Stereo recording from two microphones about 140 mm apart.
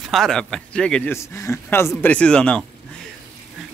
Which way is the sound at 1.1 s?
20° left (ahead or behind).